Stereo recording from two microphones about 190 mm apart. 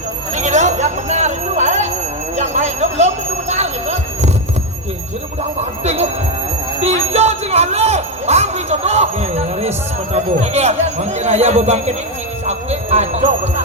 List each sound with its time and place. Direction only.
0.3 s a sound: 40° right (ahead or behind)
3.5 s music: 35° right (ahead or behind)
5.5 s speech: 35° right (ahead or behind)